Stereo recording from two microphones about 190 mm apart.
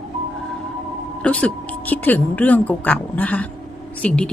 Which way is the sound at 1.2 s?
5° left (ahead or behind).